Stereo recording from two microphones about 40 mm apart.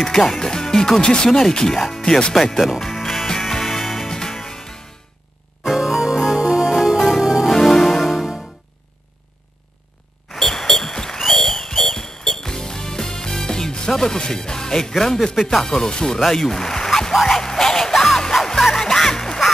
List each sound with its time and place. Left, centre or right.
0.0 s speech: centre
2.3 s speech: centre
2.9 s music: centre
4.1 s music: centre
5.6 s music: centre
7.5 s music: centre
8.0 s music: centre
10.3 s a sound: centre
11.1 s music: centre
15.4 s speech: centre
16.3 s a sound: centre
17.3 s music: centre